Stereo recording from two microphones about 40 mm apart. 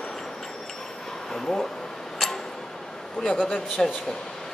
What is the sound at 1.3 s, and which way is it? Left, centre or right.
Speech, centre.